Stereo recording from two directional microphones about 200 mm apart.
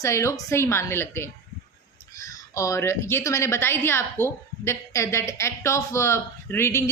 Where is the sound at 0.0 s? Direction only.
15° left (ahead or behind).